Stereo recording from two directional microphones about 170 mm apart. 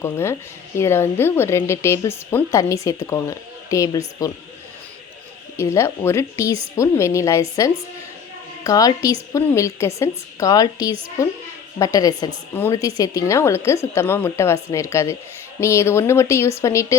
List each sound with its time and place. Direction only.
0.0 s speech: 15° left (ahead or behind)
5.5 s a woman's voice: 15° left (ahead or behind)